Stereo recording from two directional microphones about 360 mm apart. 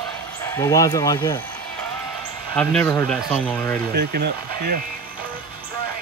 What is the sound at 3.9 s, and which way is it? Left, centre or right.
Speech, right.